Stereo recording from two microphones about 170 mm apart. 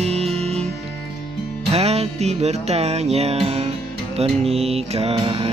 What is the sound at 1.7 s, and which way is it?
Music, 40° right (ahead or behind).